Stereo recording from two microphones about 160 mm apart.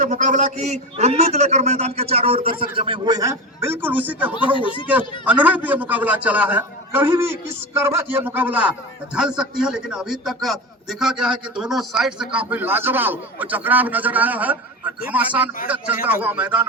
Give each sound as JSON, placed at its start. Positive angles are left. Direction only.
{"t": 0.0, "sound": "a man's voice", "side_deg": -50}
{"t": 4.5, "sound": "speech", "side_deg": 30}
{"t": 4.9, "sound": "a man's voice", "side_deg": -10}